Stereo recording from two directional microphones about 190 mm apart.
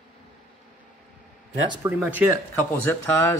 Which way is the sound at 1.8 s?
10° right (ahead or behind).